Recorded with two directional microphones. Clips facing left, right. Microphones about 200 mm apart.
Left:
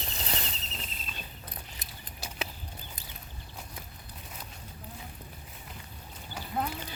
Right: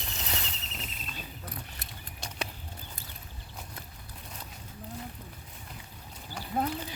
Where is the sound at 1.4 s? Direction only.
20° left (ahead or behind).